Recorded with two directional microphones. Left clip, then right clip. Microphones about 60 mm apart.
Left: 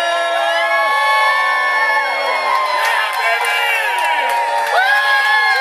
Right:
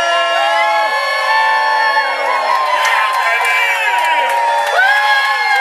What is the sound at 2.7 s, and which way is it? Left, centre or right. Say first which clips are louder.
Crowd: right 3 dB; centre.